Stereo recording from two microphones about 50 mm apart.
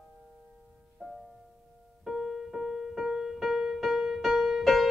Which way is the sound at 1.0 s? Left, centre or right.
Centre.